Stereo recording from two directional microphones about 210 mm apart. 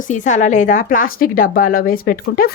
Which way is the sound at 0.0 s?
35° left (ahead or behind).